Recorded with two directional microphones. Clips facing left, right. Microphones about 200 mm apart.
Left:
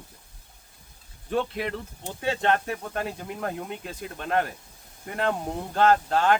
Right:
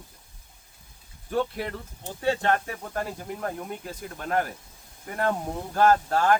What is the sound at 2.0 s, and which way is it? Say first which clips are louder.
A man's voice: right 1 dB; 20° left (ahead or behind).